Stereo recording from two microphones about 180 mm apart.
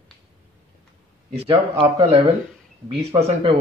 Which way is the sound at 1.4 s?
25° right (ahead or behind).